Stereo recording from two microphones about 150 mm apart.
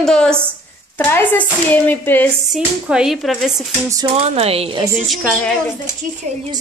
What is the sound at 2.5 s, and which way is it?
A woman's voice, 5° right (ahead or behind).